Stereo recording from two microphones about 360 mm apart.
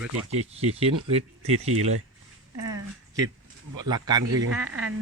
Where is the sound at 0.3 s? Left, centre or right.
Centre.